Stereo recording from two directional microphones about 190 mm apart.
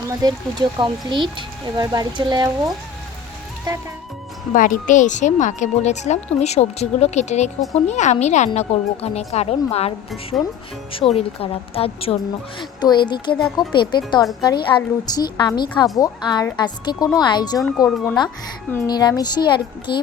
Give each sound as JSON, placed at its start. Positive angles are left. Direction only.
{"t": 0.2, "sound": "speech", "side_deg": -20}
{"t": 4.5, "sound": "speech", "side_deg": 45}
{"t": 10.9, "sound": "a woman's voice", "side_deg": 30}
{"t": 17.8, "sound": "speech", "side_deg": 5}
{"t": 18.7, "sound": "a woman's voice", "side_deg": 15}